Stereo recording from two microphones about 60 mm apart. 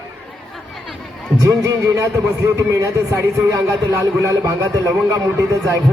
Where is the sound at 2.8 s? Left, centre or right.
Right.